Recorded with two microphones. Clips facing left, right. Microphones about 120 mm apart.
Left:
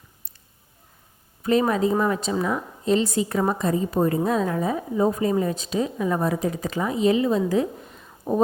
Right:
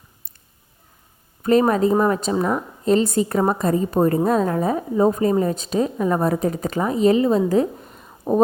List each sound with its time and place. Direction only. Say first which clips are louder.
1.4 s a woman's voice: right 4 dB; 45° right (ahead or behind)